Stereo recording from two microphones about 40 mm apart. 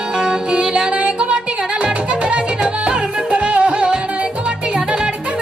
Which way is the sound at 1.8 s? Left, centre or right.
Right.